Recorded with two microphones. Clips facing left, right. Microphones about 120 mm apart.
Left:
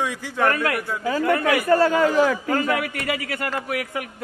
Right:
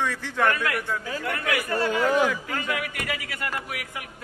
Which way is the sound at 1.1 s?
45° left (ahead or behind).